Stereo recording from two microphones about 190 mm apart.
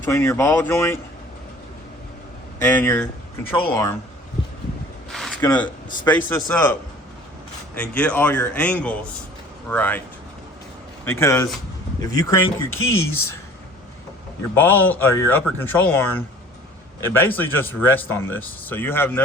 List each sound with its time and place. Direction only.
0.1 s speech: 15° left (ahead or behind)
2.6 s speech: 10° left (ahead or behind)
5.1 s a sound: centre (ahead or behind)
6.1 s speech: 10° left (ahead or behind)
7.8 s speech: 5° left (ahead or behind)
11.0 s speech: 15° left (ahead or behind)
12.7 s speech: 90° left
13.0 s speech: 15° left (ahead or behind)
14.5 s speech: 10° left (ahead or behind)